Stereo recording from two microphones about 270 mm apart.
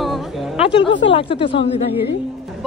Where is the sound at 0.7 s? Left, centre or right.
Centre.